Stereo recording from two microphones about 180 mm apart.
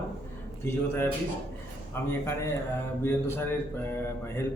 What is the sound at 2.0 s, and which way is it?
Speech, 15° left (ahead or behind).